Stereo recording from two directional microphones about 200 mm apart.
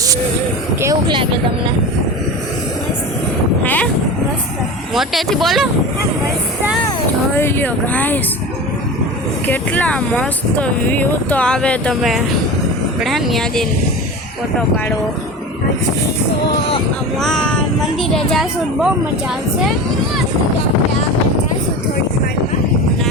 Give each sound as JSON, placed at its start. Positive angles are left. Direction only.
{"t": 0.8, "sound": "speech", "side_deg": -20}
{"t": 3.6, "sound": "speech", "side_deg": 10}
{"t": 4.9, "sound": "speech", "side_deg": 0}
{"t": 7.3, "sound": "speech", "side_deg": 10}
{"t": 9.5, "sound": "speech", "side_deg": 5}
{"t": 17.2, "sound": "speech", "side_deg": 5}